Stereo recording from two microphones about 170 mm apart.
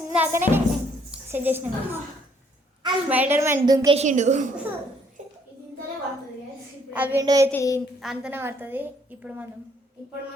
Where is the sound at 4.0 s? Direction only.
45° right (ahead or behind).